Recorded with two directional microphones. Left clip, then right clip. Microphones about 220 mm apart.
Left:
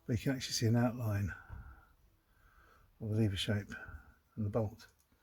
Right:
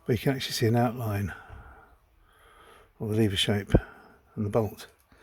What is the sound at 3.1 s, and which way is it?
Speech, 40° right (ahead or behind).